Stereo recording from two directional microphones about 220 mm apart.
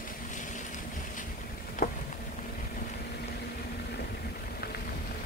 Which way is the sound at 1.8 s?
40° left (ahead or behind).